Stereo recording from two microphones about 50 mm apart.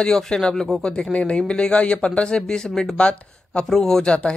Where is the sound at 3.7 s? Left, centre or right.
Centre.